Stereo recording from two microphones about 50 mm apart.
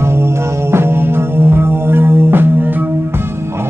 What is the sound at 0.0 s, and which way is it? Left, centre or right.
Music, right.